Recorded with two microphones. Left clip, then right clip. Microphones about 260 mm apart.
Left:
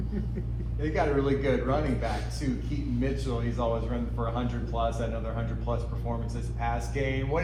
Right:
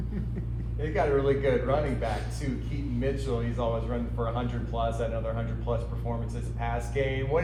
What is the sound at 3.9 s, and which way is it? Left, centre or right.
Speech, right.